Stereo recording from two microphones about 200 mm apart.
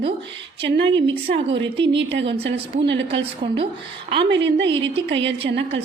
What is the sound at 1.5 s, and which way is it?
Speech, 25° right (ahead or behind).